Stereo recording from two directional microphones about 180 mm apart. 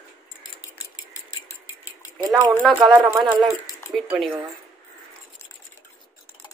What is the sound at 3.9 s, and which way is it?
Speech, centre (ahead or behind).